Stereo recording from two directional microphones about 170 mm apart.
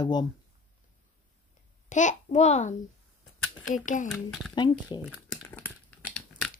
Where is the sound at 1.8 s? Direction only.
45° left (ahead or behind).